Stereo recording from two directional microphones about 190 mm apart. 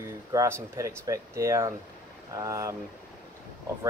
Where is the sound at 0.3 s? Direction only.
15° right (ahead or behind).